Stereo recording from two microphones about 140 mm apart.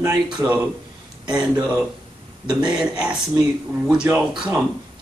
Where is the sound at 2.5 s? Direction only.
5° right (ahead or behind).